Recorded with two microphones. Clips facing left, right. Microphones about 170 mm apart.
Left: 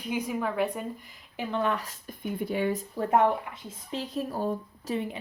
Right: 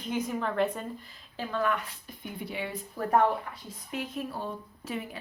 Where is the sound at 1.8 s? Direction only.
45° left (ahead or behind).